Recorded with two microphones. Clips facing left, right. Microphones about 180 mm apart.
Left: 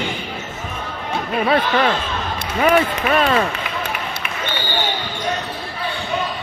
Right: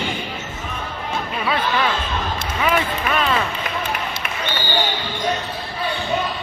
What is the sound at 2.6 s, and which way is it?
Speech, 45° left (ahead or behind).